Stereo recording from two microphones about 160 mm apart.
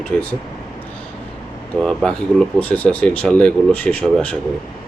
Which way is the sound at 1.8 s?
Centre (ahead or behind).